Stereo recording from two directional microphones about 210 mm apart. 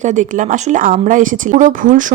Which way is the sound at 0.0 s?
35° right (ahead or behind).